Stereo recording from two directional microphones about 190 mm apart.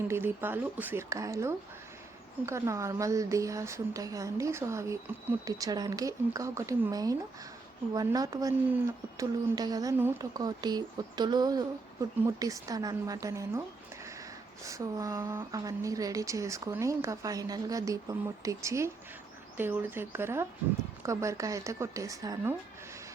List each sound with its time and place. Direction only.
0.1 s a woman's voice: 10° right (ahead or behind)
14.6 s a woman's voice: 15° right (ahead or behind)